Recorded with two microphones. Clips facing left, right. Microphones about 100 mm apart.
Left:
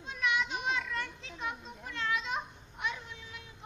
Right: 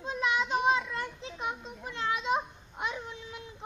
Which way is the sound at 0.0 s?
30° right (ahead or behind).